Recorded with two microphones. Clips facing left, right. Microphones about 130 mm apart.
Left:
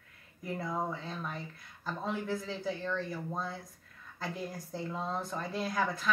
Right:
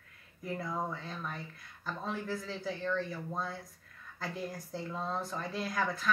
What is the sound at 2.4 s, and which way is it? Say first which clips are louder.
Speech: even; 5° left (ahead or behind).